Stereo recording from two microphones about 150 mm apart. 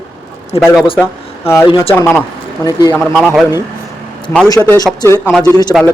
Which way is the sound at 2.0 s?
15° left (ahead or behind).